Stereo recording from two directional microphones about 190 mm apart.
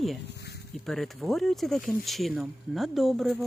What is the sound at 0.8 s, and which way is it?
Speech, centre (ahead or behind).